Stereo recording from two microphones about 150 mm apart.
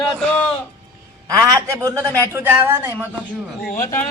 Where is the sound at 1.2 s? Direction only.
25° right (ahead or behind).